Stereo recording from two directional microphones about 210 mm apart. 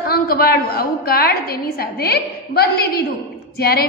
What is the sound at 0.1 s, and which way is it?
A woman's voice, 45° left (ahead or behind).